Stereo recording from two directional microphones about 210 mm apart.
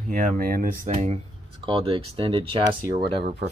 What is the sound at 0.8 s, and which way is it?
Speech, 35° right (ahead or behind).